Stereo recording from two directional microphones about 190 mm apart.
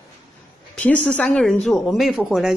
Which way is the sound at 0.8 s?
5° left (ahead or behind).